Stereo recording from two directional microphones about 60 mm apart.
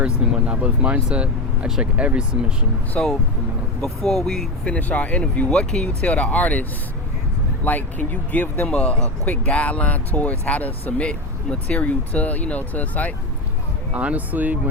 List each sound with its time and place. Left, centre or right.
0.0 s speech: right
1.6 s speech: centre
2.0 s speech: centre
3.0 s speech: centre
3.8 s speech: centre
4.6 s speech: left
8.6 s speech: centre
13.9 s speech: right